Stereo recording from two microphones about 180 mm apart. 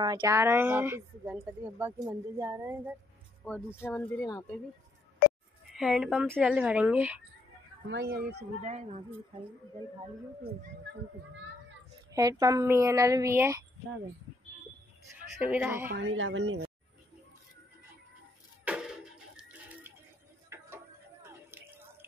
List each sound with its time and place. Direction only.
0.2 s speech: 15° right (ahead or behind)
3.4 s speech: 10° left (ahead or behind)
5.8 s speech: centre (ahead or behind)
7.9 s speech: 65° right (ahead or behind)
8.6 s speech: 40° right (ahead or behind)
12.1 s speech: 20° right (ahead or behind)
15.4 s speech: 10° right (ahead or behind)
16.0 s speech: 90° right
18.6 s a sound: 5° right (ahead or behind)